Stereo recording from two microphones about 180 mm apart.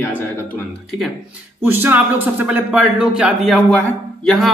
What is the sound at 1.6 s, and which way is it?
Speech, 10° right (ahead or behind).